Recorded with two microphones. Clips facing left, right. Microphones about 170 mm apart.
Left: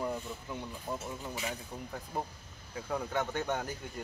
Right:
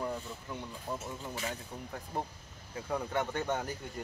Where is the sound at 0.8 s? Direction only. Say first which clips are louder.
Even; 10° left (ahead or behind).